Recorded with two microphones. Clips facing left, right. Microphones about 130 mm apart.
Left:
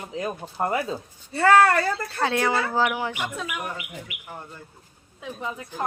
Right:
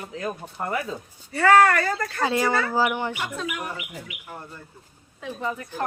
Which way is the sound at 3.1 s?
15° left (ahead or behind).